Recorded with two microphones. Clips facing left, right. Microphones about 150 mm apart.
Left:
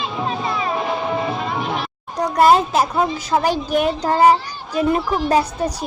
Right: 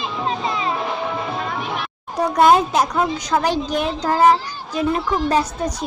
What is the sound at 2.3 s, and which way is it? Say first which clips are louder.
A woman's voice: left 1 dB; centre (ahead or behind).